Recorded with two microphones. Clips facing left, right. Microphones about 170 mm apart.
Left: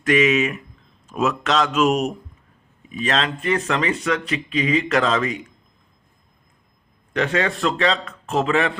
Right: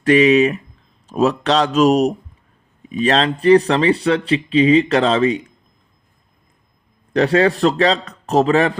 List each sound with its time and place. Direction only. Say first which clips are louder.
0.0 s speech: right 6 dB; 35° right (ahead or behind)
7.1 s speech: right 7 dB; 35° right (ahead or behind)